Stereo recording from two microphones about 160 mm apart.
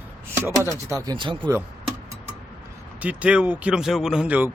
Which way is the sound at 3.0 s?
10° right (ahead or behind).